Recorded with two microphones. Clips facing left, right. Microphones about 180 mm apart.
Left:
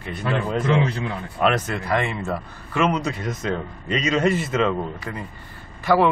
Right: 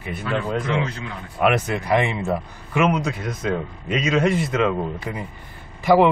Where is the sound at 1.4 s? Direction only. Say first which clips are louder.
Right 2 dB; 10° right (ahead or behind).